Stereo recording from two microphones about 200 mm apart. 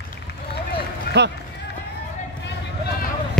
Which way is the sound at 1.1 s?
50° left (ahead or behind).